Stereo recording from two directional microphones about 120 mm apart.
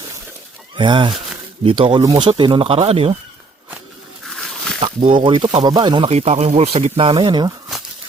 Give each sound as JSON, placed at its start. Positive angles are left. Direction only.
{"t": 0.8, "sound": "speech", "side_deg": -45}
{"t": 4.3, "sound": "a sound", "side_deg": 5}
{"t": 4.8, "sound": "speech", "side_deg": -45}
{"t": 6.1, "sound": "speech", "side_deg": -60}